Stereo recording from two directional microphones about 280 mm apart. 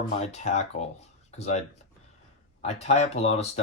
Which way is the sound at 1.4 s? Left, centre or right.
Left.